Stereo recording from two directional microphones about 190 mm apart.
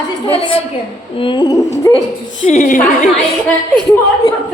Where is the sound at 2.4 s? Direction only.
40° left (ahead or behind).